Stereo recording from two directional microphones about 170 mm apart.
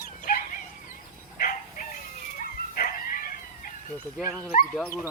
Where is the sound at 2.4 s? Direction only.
60° left (ahead or behind).